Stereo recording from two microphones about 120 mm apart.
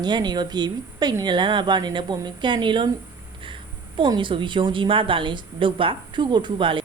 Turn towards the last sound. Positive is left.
turn(degrees=-45)  # may be behind; listen again after turning